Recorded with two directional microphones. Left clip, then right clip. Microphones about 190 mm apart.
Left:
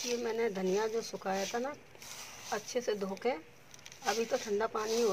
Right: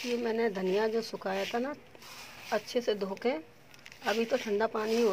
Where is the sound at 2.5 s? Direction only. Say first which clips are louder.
Right 4 dB; 45° right (ahead or behind).